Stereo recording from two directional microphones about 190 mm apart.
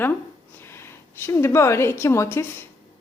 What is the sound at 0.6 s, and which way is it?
A woman's voice, 15° left (ahead or behind).